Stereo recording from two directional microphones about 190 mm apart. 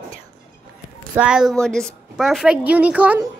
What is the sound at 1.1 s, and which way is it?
A woman's voice, 5° right (ahead or behind).